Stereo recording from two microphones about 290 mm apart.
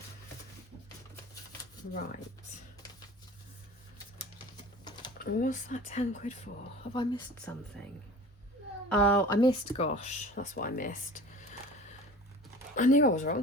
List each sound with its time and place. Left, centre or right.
4.5 s typing: centre
5.2 s speech: left
8.9 s speech: centre
9.7 s speech: left
12.7 s speech: left